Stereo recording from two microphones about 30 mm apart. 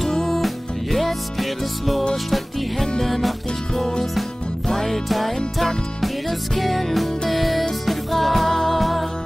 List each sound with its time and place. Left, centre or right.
0.0 s music: centre
4.6 s music: centre
6.5 s music: centre